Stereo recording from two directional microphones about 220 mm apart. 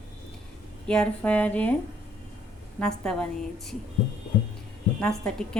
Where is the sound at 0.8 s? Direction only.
5° left (ahead or behind).